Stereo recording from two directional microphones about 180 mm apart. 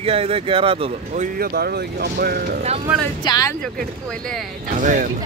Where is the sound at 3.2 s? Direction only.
20° left (ahead or behind).